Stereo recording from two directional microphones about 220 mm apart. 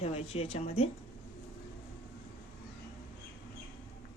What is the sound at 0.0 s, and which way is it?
Speech, 25° left (ahead or behind).